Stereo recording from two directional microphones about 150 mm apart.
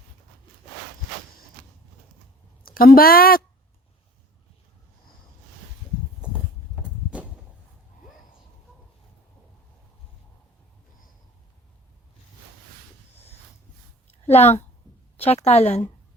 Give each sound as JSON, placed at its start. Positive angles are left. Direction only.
{"t": 2.6, "sound": "speech", "side_deg": 80}
{"t": 6.7, "sound": "walk", "side_deg": -5}
{"t": 14.1, "sound": "a sound", "side_deg": 45}
{"t": 15.2, "sound": "a woman's voice", "side_deg": 45}